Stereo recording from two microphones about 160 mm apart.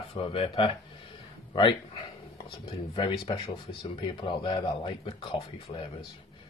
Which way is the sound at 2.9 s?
30° left (ahead or behind).